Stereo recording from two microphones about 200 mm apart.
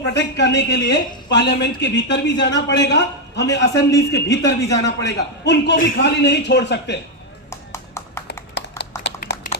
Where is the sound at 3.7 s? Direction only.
15° left (ahead or behind).